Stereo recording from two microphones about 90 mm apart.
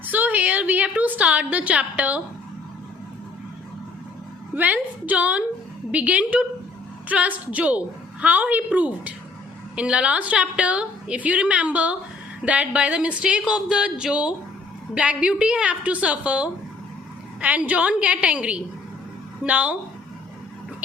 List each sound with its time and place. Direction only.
0.0 s a woman's voice: 20° right (ahead or behind)
4.5 s a woman's voice: 15° right (ahead or behind)